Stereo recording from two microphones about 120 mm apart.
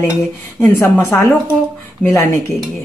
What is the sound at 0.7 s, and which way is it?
Speech, 20° left (ahead or behind).